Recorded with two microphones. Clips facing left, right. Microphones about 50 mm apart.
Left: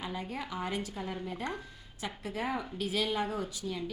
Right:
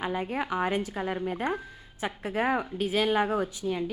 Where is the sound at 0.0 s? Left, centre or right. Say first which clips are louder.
Right 8 dB; right.